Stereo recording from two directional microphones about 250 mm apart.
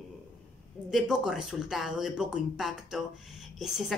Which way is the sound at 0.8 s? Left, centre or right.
Centre.